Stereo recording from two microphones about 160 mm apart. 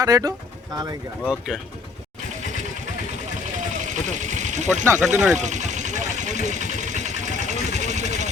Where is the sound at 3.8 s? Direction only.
50° right (ahead or behind).